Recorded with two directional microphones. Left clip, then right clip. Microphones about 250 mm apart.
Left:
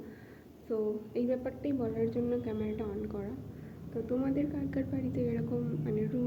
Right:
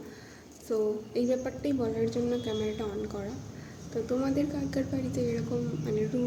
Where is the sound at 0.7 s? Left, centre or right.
Centre.